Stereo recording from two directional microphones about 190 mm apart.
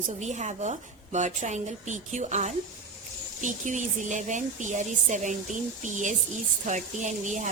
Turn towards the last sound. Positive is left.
turn(degrees=-40)  # may be behind; listen again after turning